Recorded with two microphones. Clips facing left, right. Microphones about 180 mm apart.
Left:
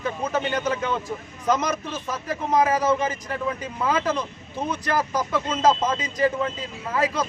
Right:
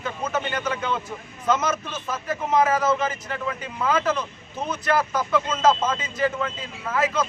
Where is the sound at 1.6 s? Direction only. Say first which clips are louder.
Even; 15° left (ahead or behind).